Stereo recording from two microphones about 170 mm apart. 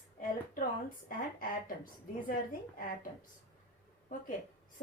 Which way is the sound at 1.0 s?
55° left (ahead or behind).